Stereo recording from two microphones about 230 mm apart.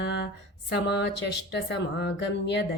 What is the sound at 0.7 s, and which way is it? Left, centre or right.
Speech, left.